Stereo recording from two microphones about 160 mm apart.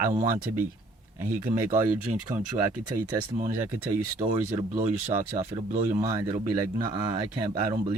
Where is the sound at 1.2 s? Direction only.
15° right (ahead or behind).